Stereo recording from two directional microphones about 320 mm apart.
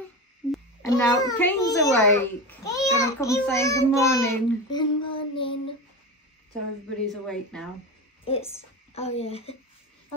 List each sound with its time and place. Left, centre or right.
0.8 s a child's voice: centre
7.1 s a woman's voice: centre
8.3 s a woman's voice: centre